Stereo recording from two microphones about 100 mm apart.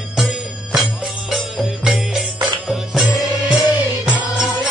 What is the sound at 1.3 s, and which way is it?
Music, centre (ahead or behind).